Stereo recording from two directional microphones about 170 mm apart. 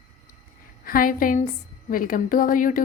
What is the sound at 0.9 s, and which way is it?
A woman's voice, 55° left (ahead or behind).